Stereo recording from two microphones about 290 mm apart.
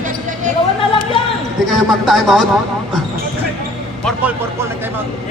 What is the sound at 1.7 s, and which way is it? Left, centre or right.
Speech, centre.